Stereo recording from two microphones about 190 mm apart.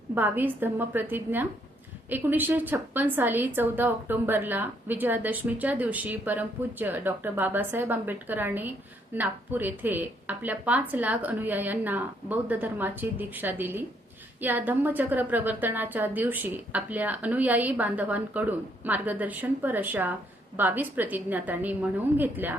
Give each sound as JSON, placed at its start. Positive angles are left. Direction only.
{"t": 0.1, "sound": "a woman's voice", "side_deg": -10}